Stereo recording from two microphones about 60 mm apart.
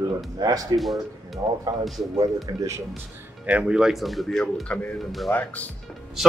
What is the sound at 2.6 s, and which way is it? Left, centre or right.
Speech, right.